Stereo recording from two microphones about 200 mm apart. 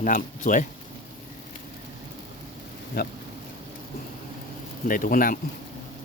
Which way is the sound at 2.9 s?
50° left (ahead or behind).